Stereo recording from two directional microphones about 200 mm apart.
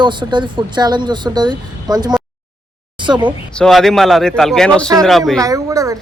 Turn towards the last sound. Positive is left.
turn(degrees=-15)  # may be behind; listen again after turning